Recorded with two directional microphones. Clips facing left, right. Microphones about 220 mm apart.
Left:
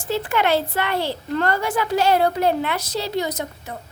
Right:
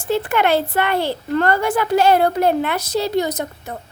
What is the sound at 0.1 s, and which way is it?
Speech, 55° right (ahead or behind).